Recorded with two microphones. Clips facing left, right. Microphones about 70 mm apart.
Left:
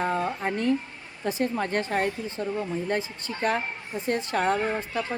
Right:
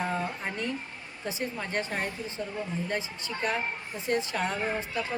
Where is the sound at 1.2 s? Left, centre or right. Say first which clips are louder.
Left 7 dB; left.